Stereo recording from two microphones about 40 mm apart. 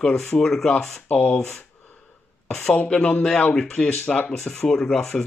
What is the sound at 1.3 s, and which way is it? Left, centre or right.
Speech, centre.